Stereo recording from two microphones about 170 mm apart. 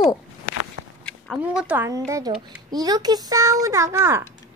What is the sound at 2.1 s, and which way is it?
A child's voice, 25° right (ahead or behind).